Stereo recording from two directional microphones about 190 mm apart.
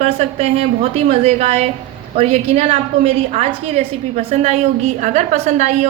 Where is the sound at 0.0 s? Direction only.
35° right (ahead or behind).